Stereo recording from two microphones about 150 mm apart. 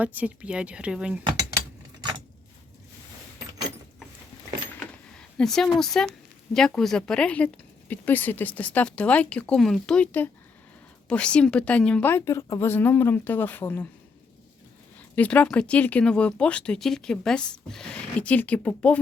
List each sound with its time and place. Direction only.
0.0 s speech: 10° right (ahead or behind)
2.0 s a sound: 30° right (ahead or behind)
5.1 s a woman's voice: 5° left (ahead or behind)
15.1 s speech: 10° left (ahead or behind)